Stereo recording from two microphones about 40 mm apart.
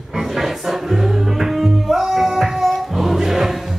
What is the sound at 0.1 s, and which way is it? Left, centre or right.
Music, centre.